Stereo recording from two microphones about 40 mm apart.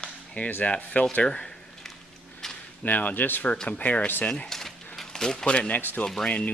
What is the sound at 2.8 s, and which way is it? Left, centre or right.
Speech, left.